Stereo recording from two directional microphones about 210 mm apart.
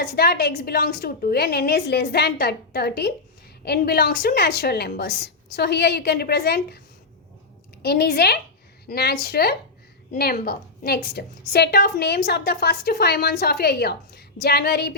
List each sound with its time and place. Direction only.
0.0 s a woman's voice: 45° left (ahead or behind)